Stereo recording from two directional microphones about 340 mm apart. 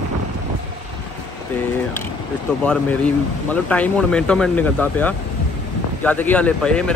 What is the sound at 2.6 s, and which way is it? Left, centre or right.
Speech, centre.